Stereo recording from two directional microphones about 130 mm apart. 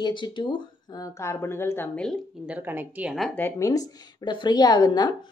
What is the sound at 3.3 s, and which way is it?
Speech, 15° left (ahead or behind).